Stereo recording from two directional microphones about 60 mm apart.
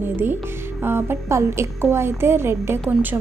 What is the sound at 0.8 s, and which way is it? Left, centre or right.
A woman's voice, right.